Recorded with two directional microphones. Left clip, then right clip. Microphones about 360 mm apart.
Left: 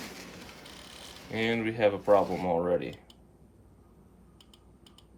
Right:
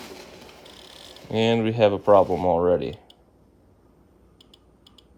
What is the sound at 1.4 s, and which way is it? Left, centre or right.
Speech, centre.